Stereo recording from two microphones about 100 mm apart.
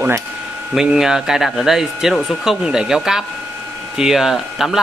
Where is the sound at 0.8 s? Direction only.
5° right (ahead or behind).